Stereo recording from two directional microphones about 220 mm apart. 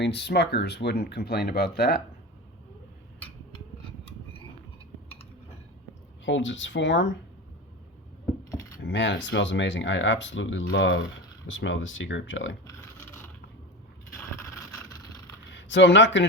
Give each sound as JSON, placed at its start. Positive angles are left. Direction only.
{"t": 0.0, "sound": "speech", "side_deg": 50}
{"t": 3.5, "sound": "a sound", "side_deg": 25}
{"t": 6.2, "sound": "speech", "side_deg": 55}
{"t": 8.4, "sound": "cutlery", "side_deg": 15}
{"t": 8.8, "sound": "speech", "side_deg": 55}
{"t": 15.5, "sound": "speech", "side_deg": 55}